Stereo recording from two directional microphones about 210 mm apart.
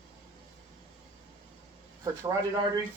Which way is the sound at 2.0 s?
20° right (ahead or behind).